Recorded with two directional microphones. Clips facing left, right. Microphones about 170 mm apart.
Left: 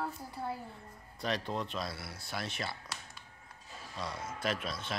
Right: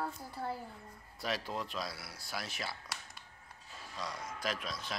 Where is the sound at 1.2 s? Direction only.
5° right (ahead or behind).